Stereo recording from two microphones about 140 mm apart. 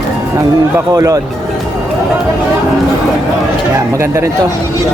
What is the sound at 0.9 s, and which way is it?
Speech, 25° right (ahead or behind).